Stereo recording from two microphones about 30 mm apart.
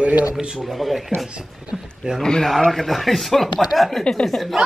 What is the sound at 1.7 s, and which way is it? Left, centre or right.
Speech, centre.